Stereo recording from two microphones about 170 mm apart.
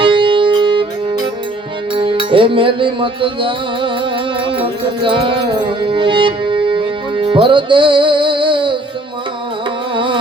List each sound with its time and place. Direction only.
0.0 s music: 30° right (ahead or behind)
9.9 s music: 30° right (ahead or behind)